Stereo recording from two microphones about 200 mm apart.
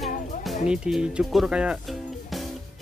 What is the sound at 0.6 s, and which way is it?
Speech, 5° right (ahead or behind).